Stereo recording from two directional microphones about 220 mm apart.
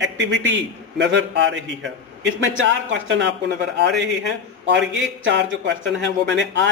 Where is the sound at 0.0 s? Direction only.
55° right (ahead or behind).